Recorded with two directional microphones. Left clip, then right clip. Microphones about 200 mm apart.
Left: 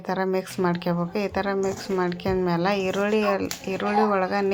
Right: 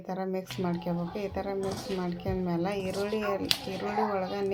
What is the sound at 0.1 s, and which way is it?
A woman's voice, 20° left (ahead or behind).